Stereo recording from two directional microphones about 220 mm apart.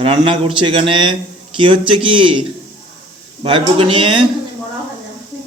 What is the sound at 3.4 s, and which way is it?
Speech, 20° right (ahead or behind).